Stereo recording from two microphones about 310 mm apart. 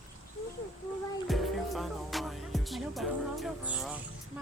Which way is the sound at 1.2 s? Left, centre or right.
Centre.